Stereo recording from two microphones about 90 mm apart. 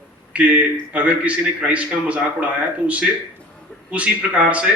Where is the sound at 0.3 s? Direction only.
15° right (ahead or behind).